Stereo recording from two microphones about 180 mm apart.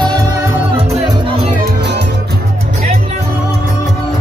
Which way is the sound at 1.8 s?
70° right (ahead or behind).